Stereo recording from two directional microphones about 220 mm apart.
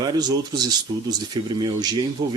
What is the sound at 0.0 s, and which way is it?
Speech, 20° right (ahead or behind).